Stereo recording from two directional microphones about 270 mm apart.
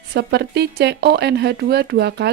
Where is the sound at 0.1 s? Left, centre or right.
Right.